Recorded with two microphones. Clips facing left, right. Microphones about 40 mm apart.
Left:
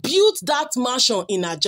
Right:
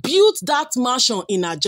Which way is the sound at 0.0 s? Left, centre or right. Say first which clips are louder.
Right 2 dB; centre.